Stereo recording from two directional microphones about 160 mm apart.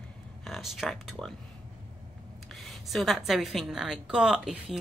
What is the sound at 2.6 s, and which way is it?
Speech, centre (ahead or behind).